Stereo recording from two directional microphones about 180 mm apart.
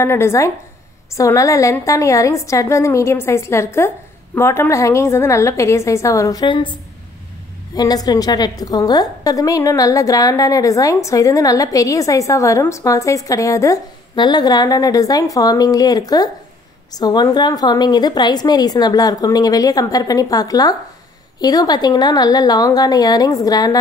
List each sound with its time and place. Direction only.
0.0 s a woman's voice: 15° left (ahead or behind)